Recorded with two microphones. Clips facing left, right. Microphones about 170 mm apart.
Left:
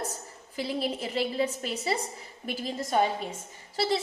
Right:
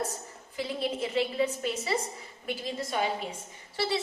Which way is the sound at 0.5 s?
35° left (ahead or behind).